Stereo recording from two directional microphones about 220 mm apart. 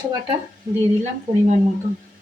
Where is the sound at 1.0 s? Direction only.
35° right (ahead or behind).